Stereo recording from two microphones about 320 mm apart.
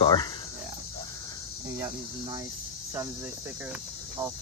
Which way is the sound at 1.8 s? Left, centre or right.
Centre.